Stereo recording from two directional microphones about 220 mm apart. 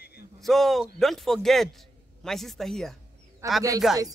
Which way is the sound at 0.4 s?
Centre (ahead or behind).